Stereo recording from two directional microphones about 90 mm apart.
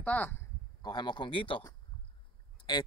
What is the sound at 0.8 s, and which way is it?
Speech, 55° left (ahead or behind).